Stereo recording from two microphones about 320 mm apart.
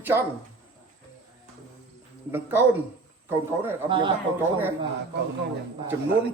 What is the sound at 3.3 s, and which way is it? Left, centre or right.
Speech, centre.